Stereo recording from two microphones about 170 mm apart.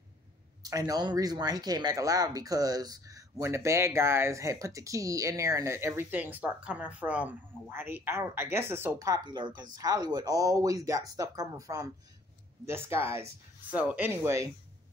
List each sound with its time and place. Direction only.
0.6 s speech: 20° right (ahead or behind)